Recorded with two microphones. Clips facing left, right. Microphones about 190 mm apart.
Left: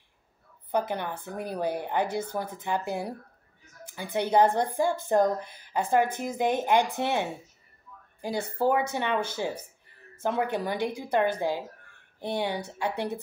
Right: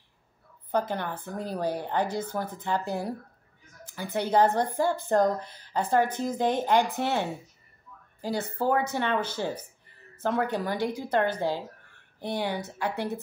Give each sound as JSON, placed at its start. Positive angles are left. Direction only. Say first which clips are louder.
{"t": 0.7, "sound": "a woman's voice", "louder": "even", "side_deg": 15}